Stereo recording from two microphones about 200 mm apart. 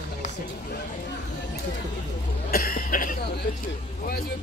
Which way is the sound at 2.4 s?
50° left (ahead or behind).